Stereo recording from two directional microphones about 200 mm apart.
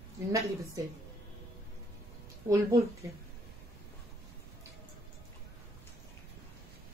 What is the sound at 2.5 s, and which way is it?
Speech, 15° right (ahead or behind).